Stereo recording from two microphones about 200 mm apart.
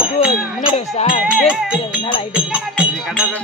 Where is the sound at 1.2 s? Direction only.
5° right (ahead or behind).